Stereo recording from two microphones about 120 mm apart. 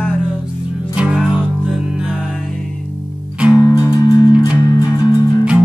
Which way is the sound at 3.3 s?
10° right (ahead or behind).